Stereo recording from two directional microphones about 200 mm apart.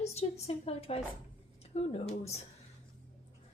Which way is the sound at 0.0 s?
30° left (ahead or behind).